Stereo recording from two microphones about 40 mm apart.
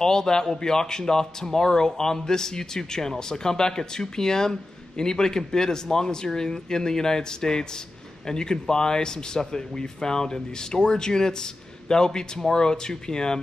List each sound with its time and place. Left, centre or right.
0.0 s speech: centre